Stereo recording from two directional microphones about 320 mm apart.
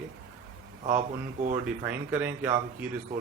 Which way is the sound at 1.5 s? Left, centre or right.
Centre.